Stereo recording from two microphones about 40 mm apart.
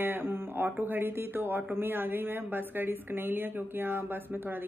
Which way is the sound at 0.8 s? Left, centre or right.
Right.